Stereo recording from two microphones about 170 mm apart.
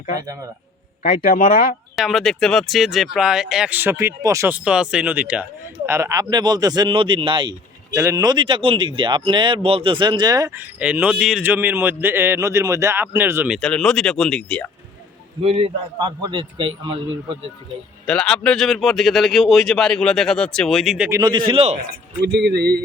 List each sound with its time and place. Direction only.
1.2 s speech: 55° left (ahead or behind)
2.0 s speech: centre (ahead or behind); by 7.5 s 30° right (ahead or behind)
7.9 s speech: 20° right (ahead or behind)
13.5 s speech: 5° left (ahead or behind)
15.4 s a man's voice: 35° right (ahead or behind)
18.0 s speech: 5° left (ahead or behind)
21.1 s speech: 25° right (ahead or behind)
22.2 s a sound: 90° right; by 22.8 s 70° right (ahead or behind)